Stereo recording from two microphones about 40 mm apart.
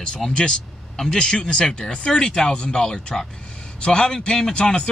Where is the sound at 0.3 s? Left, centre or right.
Left.